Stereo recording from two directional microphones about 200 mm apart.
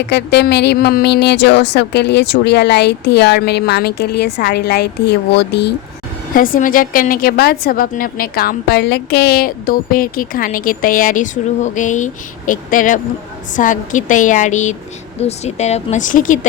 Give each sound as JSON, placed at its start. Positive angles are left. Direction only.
{"t": 0.0, "sound": "a woman's voice", "side_deg": 55}
{"t": 6.3, "sound": "a woman's voice", "side_deg": 45}